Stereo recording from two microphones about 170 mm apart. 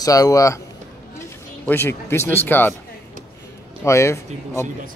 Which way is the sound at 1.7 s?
15° left (ahead or behind).